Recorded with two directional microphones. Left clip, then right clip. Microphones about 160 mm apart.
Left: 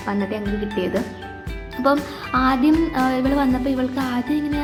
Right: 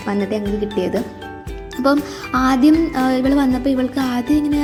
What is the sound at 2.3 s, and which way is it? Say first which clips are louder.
Speech: right 3 dB; 50° right (ahead or behind).